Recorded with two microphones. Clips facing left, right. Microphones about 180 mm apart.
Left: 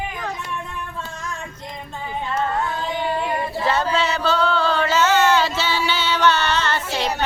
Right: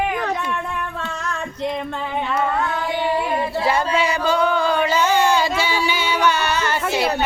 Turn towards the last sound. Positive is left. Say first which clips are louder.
# right 3 dB
turn(degrees=-10)  # may be behind; listen again after turning